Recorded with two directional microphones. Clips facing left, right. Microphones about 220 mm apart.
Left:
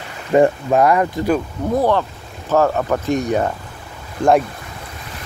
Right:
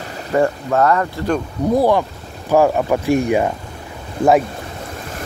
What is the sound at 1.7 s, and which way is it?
Speech, 10° right (ahead or behind).